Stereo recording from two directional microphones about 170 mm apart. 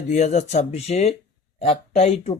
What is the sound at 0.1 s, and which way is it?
Speech, 45° left (ahead or behind).